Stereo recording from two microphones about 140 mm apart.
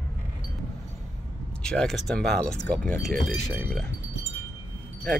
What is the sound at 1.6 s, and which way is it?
Speech, 5° left (ahead or behind).